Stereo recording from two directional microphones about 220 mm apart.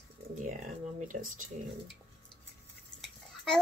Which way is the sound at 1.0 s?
35° right (ahead or behind).